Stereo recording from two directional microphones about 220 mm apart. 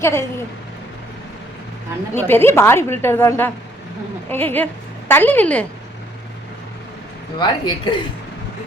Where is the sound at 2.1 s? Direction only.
10° left (ahead or behind).